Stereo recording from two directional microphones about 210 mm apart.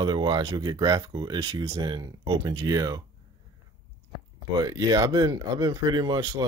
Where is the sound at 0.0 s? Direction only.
20° right (ahead or behind).